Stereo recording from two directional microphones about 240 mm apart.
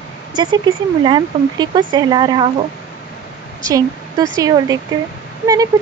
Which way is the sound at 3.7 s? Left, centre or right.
Centre.